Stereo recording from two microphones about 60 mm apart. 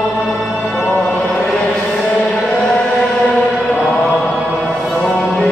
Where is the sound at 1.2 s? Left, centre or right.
Left.